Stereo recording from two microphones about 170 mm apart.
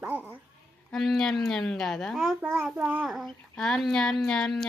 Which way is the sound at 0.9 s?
Centre (ahead or behind).